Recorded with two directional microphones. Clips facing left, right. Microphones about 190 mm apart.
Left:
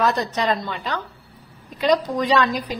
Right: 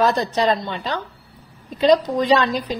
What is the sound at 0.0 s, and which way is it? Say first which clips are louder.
A woman's voice: right 3 dB; 30° right (ahead or behind).